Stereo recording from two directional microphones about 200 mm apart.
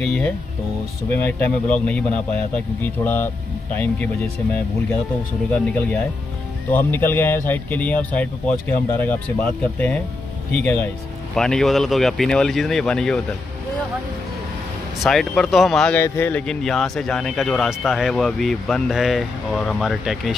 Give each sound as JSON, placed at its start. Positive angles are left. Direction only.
{"t": 0.0, "sound": "speech", "side_deg": 5}
{"t": 6.7, "sound": "speech", "side_deg": 10}
{"t": 15.0, "sound": "speech", "side_deg": 5}